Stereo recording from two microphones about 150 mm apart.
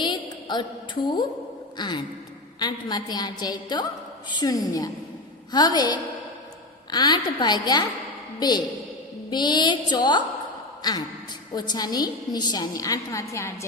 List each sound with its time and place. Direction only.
0.0 s a sound: 30° left (ahead or behind)
1.8 s a woman's voice: 30° left (ahead or behind)
11.5 s a woman's voice: 30° left (ahead or behind)